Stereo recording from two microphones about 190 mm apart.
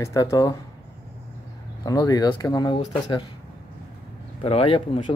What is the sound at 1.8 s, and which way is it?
Speech, 20° left (ahead or behind).